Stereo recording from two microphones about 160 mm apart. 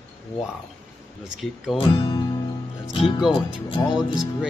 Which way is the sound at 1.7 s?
35° left (ahead or behind).